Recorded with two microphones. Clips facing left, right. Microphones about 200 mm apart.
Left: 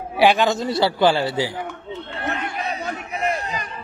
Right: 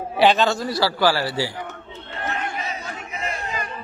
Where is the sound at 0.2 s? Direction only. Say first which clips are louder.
Left 1 dB; 10° left (ahead or behind).